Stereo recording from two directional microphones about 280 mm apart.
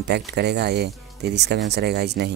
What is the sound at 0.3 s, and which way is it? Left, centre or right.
Speech, right.